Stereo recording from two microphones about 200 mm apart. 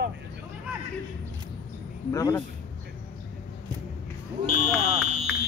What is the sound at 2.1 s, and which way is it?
Speech, 15° left (ahead or behind).